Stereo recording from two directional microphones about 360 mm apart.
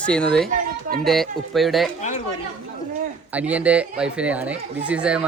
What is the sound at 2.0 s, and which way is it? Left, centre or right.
Speech, centre.